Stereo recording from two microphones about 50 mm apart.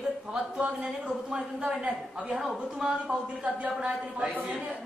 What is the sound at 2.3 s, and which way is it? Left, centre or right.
Speech, centre.